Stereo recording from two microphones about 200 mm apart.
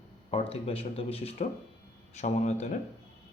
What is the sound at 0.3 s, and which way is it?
Speech, 30° left (ahead or behind).